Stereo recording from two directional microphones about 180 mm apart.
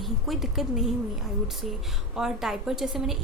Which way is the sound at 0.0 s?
Centre (ahead or behind).